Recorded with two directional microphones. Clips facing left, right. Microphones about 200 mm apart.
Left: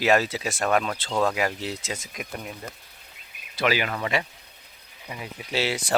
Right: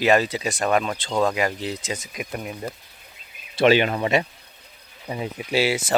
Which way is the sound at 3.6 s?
25° right (ahead or behind).